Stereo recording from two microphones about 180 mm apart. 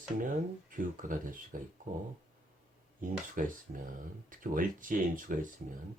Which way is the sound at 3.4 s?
45° right (ahead or behind).